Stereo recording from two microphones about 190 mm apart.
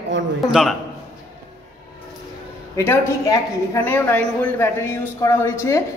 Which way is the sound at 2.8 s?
15° left (ahead or behind).